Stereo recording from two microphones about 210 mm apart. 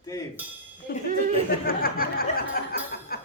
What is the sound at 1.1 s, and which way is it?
Speech, 40° right (ahead or behind).